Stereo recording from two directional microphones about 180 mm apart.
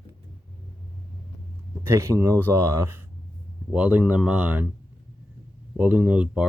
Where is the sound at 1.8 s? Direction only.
15° right (ahead or behind).